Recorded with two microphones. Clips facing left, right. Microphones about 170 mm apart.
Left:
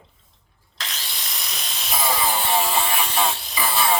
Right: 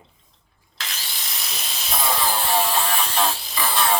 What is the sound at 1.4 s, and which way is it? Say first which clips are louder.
Electric shaver: right 1 dB; centre (ahead or behind).